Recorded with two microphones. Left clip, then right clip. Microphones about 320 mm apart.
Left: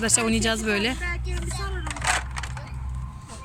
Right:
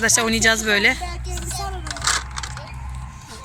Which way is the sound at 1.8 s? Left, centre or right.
Left.